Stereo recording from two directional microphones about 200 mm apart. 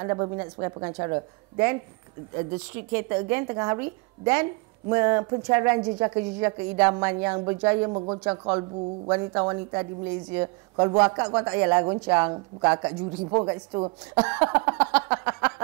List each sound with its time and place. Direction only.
0.0 s speech: 20° right (ahead or behind)
2.9 s a woman's voice: 15° right (ahead or behind)
14.1 s a sound: 10° right (ahead or behind)